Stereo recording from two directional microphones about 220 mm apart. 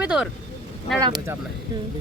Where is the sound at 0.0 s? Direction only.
5° right (ahead or behind).